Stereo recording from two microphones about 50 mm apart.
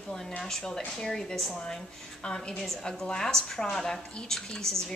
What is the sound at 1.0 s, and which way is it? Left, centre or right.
A woman's voice, centre.